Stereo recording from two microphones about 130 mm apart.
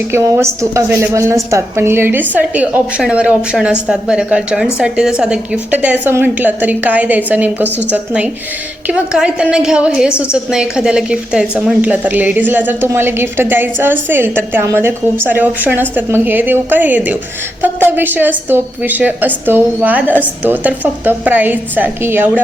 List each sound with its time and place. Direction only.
0.1 s a woman's voice: 20° right (ahead or behind)